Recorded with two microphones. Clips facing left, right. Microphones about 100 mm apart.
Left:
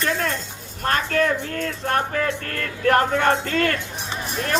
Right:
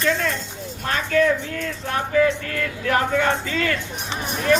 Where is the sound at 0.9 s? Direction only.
50° left (ahead or behind).